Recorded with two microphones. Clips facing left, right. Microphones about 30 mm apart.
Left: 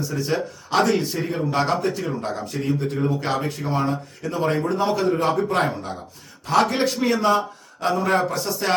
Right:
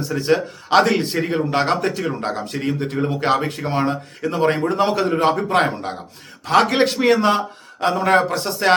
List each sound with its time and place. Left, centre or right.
0.2 s speech: right
4.7 s speech: right
5.5 s speech: right